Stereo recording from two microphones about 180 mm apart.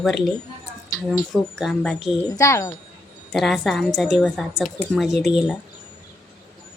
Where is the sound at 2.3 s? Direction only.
15° left (ahead or behind).